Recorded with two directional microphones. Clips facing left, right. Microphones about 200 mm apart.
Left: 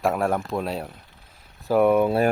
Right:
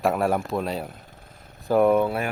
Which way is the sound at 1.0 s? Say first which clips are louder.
Right 6 dB; 45° right (ahead or behind).